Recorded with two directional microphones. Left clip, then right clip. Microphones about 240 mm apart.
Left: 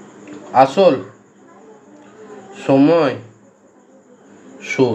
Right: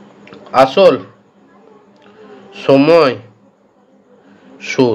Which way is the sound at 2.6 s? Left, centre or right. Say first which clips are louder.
Right 4 dB; right.